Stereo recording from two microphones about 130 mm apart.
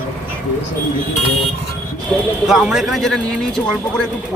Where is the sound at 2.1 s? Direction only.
10° left (ahead or behind).